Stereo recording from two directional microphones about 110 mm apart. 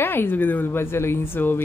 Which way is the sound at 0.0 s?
20° left (ahead or behind).